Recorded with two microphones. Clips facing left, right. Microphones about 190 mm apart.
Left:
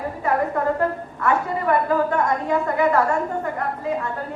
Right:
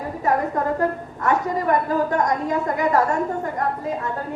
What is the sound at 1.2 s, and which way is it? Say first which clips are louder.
A woman's voice: even; 40° right (ahead or behind).